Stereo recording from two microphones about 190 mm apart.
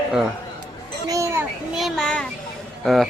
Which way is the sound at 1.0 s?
15° right (ahead or behind).